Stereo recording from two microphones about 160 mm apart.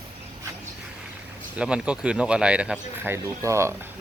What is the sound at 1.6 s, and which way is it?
Speech, 5° right (ahead or behind).